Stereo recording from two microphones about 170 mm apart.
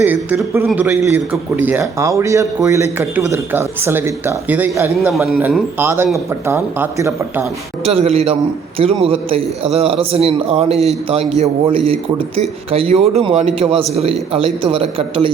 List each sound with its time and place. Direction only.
0.0 s a man's voice: 10° right (ahead or behind)
5.8 s a man's voice: 15° right (ahead or behind)
7.9 s a man's voice: 35° right (ahead or behind)